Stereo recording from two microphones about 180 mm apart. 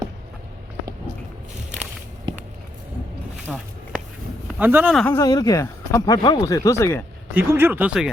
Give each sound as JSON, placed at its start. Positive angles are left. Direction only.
{"t": 3.5, "sound": "speech", "side_deg": -5}
{"t": 4.9, "sound": "speech", "side_deg": 10}
{"t": 5.2, "sound": "speech", "side_deg": 20}
{"t": 7.3, "sound": "speech", "side_deg": -10}